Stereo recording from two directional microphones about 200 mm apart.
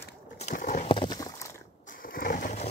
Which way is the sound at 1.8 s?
45° left (ahead or behind).